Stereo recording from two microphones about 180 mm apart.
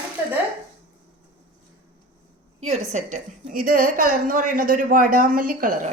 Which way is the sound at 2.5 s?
35° right (ahead or behind).